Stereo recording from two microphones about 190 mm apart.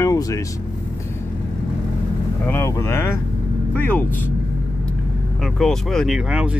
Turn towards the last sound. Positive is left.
turn(degrees=-5)  # may be behind; listen again after turning